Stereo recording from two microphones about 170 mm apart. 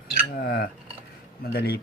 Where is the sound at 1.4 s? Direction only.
70° left (ahead or behind).